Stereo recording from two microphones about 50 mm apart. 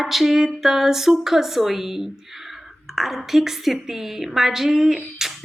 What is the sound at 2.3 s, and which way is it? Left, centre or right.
Speech, centre.